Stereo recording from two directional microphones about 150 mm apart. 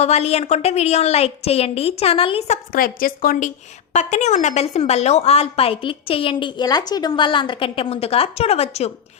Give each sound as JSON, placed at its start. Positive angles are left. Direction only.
{"t": 0.0, "sound": "a woman's voice", "side_deg": 45}
{"t": 2.5, "sound": "a woman's voice", "side_deg": 70}
{"t": 3.9, "sound": "a woman's voice", "side_deg": 50}